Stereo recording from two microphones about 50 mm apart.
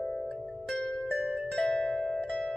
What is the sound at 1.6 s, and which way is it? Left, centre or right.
Harp, left.